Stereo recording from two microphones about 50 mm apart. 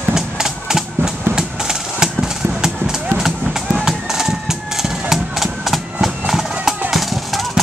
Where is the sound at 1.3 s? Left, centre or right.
Centre.